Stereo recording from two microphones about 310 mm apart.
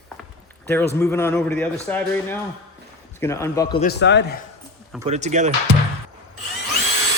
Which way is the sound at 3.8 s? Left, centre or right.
Left.